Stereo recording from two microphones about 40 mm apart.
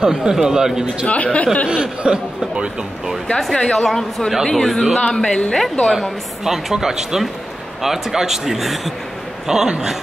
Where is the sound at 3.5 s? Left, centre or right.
Centre.